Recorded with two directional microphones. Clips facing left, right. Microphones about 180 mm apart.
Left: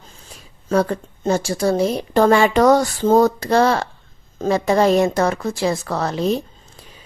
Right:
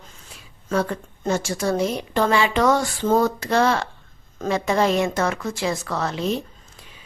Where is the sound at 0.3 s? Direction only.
40° left (ahead or behind).